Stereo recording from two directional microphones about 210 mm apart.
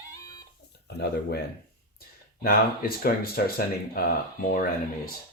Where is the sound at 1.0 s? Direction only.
50° left (ahead or behind).